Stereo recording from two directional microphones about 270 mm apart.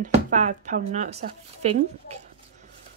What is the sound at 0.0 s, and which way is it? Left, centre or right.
Speech, right.